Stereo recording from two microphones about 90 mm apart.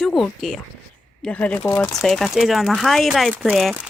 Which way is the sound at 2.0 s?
Centre (ahead or behind).